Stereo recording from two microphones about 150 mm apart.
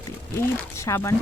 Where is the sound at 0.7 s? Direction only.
20° left (ahead or behind).